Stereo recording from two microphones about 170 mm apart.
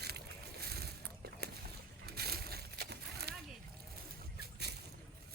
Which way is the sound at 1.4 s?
70° right (ahead or behind).